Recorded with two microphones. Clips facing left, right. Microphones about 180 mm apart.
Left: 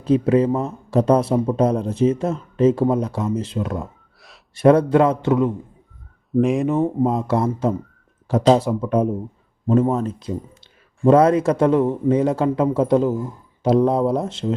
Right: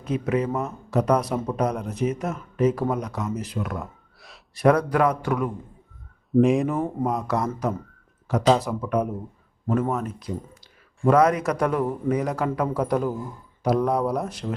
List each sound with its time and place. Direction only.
0.0 s speech: 30° left (ahead or behind)
6.3 s speech: centre (ahead or behind)
6.7 s speech: 25° left (ahead or behind)